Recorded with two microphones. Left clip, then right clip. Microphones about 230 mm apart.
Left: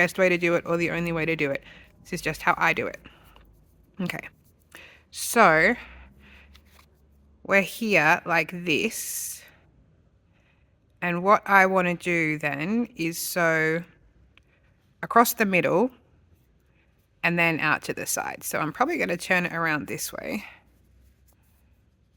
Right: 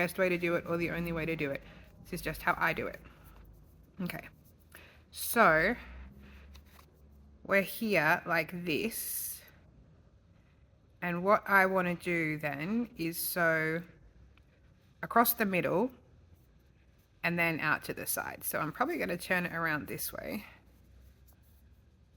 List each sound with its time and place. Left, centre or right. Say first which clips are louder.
0.0 s speech: left 9 dB; left
3.9 s a sound: left 9 dB; left
7.4 s speech: left 7 dB; left
11.0 s speech: left 8 dB; left
15.0 s speech: left 8 dB; left
17.2 s speech: left 8 dB; left